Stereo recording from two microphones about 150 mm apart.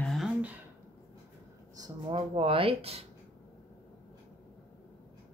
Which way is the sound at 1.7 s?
25° right (ahead or behind).